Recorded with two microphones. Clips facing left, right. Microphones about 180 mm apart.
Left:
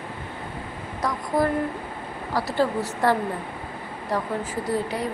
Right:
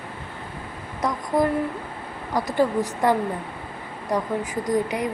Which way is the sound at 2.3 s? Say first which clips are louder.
Right 2 dB; 15° right (ahead or behind).